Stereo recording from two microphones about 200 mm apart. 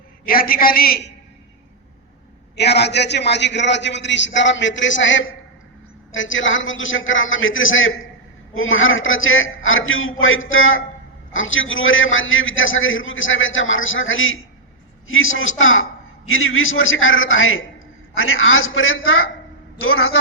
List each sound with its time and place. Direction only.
0.3 s a man's voice: 45° left (ahead or behind)
2.6 s a man's voice: 55° left (ahead or behind); by 20.1 s 90° left